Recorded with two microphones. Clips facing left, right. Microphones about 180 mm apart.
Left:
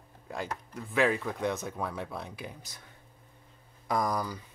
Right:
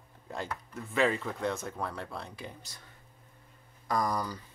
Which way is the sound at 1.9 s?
15° left (ahead or behind).